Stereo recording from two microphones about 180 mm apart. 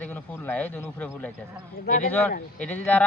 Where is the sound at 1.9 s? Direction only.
50° left (ahead or behind).